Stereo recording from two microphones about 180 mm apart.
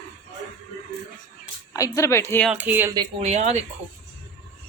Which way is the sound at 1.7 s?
15° left (ahead or behind).